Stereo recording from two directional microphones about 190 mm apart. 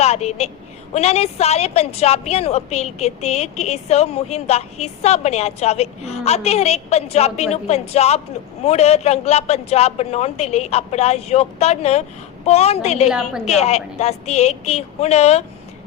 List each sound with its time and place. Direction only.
0.0 s a woman's voice: 35° left (ahead or behind)